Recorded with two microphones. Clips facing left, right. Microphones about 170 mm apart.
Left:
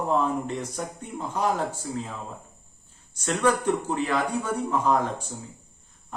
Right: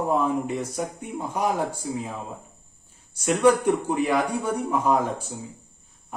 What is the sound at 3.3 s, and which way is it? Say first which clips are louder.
A man's voice: right 4 dB; 10° right (ahead or behind).